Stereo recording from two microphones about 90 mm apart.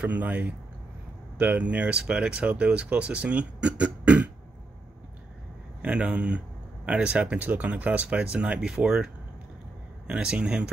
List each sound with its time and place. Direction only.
0.0 s speech: 15° right (ahead or behind)
5.8 s speech: 15° right (ahead or behind)